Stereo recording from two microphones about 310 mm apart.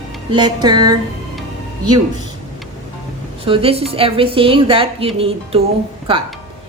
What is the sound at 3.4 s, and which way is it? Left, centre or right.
A woman's voice, centre.